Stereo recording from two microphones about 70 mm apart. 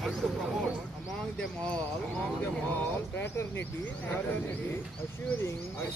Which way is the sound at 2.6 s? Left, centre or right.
Left.